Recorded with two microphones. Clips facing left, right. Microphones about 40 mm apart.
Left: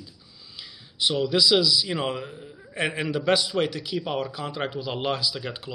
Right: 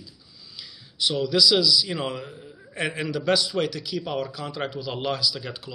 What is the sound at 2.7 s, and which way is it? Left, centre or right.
A man's voice, centre.